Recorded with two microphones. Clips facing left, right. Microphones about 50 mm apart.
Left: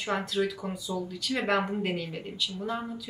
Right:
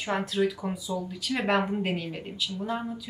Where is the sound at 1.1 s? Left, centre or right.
Centre.